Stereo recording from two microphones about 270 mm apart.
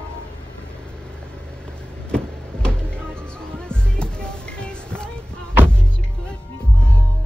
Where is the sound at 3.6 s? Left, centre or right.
Centre.